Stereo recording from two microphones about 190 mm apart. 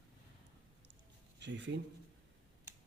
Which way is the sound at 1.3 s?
65° right (ahead or behind).